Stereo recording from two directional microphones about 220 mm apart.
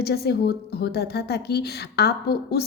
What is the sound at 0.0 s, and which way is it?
A woman's voice, 45° left (ahead or behind).